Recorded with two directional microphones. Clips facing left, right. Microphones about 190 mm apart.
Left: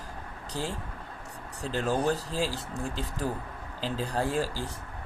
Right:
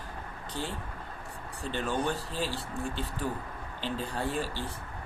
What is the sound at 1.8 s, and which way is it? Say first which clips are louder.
Speech: left 4 dB; 35° left (ahead or behind).